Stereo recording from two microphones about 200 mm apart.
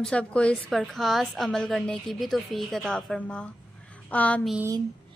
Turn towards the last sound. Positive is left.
turn(degrees=5)  # may be behind; listen again after turning